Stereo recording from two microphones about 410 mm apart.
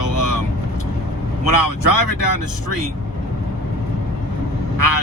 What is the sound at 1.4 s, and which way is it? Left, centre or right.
Speech, left.